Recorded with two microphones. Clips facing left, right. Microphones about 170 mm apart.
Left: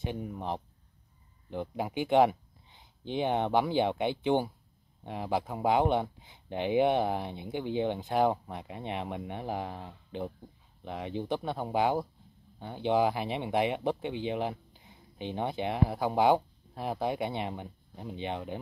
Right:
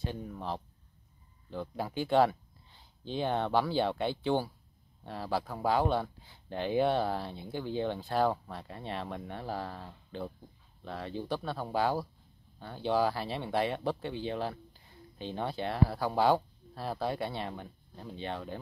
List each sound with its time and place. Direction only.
0.0 s speech: 15° left (ahead or behind)